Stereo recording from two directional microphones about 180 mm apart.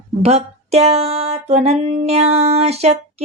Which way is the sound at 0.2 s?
35° right (ahead or behind).